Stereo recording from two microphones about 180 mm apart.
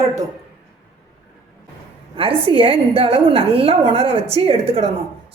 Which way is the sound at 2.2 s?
30° right (ahead or behind).